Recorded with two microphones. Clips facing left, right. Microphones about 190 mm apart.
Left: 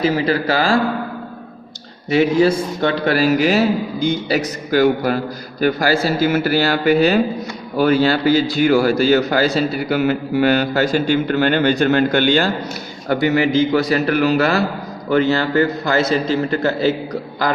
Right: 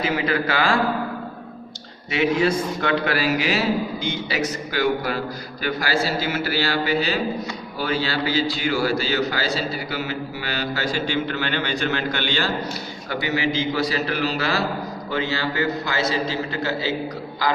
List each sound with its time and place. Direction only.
0.0 s a man's voice: 35° left (ahead or behind)
2.0 s a man's voice: 35° left (ahead or behind)